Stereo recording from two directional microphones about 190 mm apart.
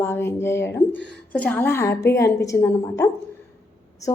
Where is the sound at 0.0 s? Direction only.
10° left (ahead or behind).